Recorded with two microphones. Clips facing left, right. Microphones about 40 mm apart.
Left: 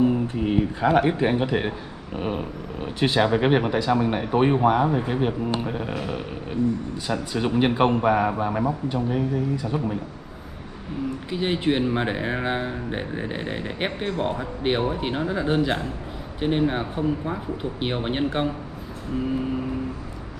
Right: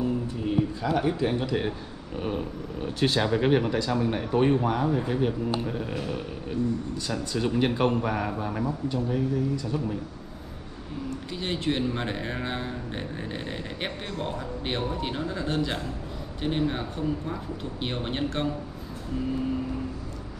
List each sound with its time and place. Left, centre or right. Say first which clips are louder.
0.0 s speech: left 7 dB; left
11.2 s speech: left 6 dB; left